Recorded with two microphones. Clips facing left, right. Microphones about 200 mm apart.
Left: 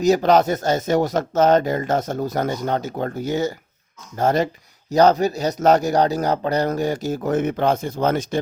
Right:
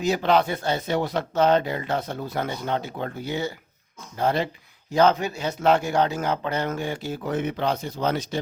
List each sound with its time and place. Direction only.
0.0 s speech: 40° left (ahead or behind)